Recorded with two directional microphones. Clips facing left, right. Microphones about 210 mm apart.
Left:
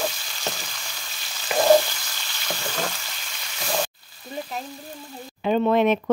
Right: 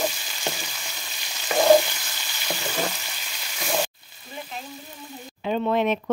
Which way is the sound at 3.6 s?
5° right (ahead or behind).